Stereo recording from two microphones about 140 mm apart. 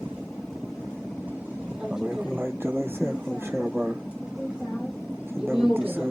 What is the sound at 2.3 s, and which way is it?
Speech, 15° right (ahead or behind).